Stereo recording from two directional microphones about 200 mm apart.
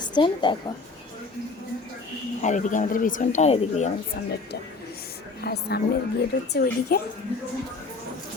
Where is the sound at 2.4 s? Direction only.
40° left (ahead or behind).